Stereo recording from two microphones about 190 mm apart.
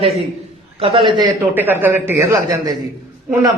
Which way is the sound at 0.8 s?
30° right (ahead or behind).